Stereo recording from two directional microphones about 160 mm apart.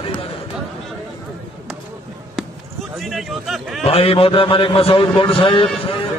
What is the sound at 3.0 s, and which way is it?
Speech, centre (ahead or behind).